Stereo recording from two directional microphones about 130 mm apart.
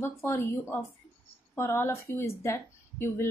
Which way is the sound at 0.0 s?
20° left (ahead or behind).